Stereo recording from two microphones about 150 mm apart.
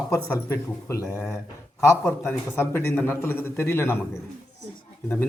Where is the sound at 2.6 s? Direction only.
15° left (ahead or behind).